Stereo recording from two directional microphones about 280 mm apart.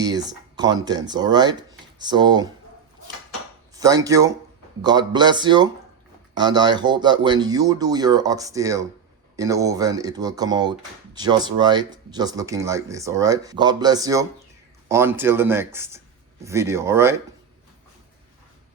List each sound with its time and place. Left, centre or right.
0.0 s speech: centre
3.8 s speech: centre